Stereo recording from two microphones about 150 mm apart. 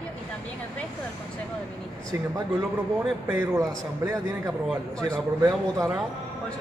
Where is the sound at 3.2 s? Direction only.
15° right (ahead or behind).